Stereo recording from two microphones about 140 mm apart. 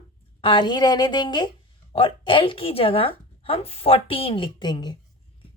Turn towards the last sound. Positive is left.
turn(degrees=30)  # may be behind; listen again after turning